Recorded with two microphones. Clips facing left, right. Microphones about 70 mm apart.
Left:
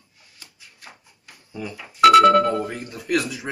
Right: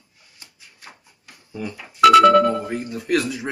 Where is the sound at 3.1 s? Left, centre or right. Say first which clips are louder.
Right 2 dB; right.